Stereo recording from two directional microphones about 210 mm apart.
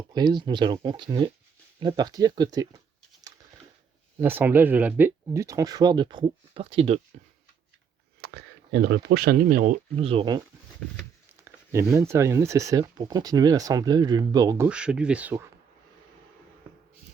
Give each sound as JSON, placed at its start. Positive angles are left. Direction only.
{"t": 0.1, "sound": "speech", "side_deg": -20}
{"t": 4.2, "sound": "speech", "side_deg": -10}
{"t": 8.2, "sound": "speech", "side_deg": -50}
{"t": 11.4, "sound": "speech", "side_deg": -15}
{"t": 14.7, "sound": "speech", "side_deg": -5}